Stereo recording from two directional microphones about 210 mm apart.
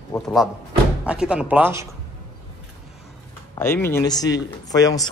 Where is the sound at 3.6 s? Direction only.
10° left (ahead or behind).